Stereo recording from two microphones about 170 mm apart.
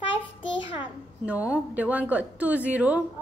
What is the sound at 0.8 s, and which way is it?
A woman's voice, 10° right (ahead or behind).